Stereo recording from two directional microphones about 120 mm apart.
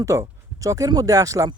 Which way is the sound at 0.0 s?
25° right (ahead or behind).